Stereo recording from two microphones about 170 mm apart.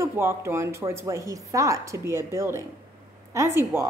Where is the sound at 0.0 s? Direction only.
15° right (ahead or behind).